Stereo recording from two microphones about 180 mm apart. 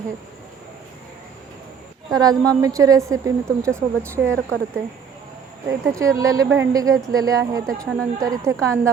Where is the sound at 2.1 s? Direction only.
20° right (ahead or behind).